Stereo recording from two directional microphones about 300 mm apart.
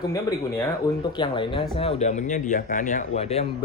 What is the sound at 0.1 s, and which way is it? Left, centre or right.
Speech, centre.